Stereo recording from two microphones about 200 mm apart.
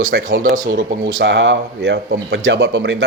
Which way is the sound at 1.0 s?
65° right (ahead or behind).